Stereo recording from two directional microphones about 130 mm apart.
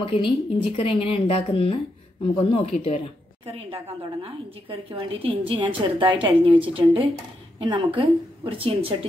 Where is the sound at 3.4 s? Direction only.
50° right (ahead or behind).